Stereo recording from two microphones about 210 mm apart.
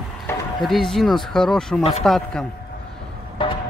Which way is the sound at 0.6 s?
Centre (ahead or behind).